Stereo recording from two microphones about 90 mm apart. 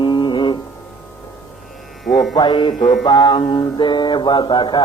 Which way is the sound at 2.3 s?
60° left (ahead or behind).